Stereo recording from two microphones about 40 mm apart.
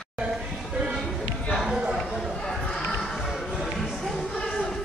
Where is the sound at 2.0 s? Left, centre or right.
Centre.